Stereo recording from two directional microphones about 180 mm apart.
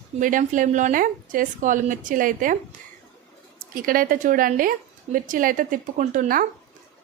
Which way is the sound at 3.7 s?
50° right (ahead or behind).